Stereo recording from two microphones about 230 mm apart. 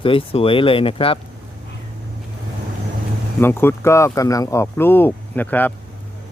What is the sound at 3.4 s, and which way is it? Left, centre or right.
Speech, centre.